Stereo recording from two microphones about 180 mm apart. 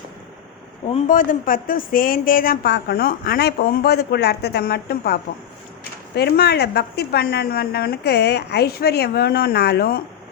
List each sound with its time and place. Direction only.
1.0 s speech: 45° left (ahead or behind)